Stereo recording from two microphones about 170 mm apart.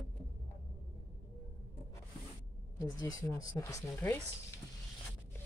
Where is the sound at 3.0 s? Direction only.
20° left (ahead or behind).